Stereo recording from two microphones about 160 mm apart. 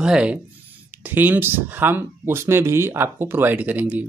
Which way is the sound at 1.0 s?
10° right (ahead or behind).